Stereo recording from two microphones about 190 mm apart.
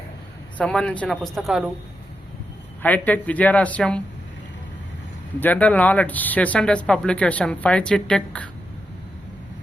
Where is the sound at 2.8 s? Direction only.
10° left (ahead or behind).